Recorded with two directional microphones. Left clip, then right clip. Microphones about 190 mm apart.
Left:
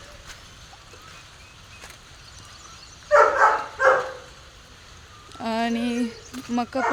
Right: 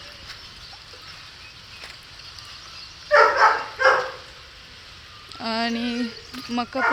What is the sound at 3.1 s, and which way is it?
Dog, 45° left (ahead or behind).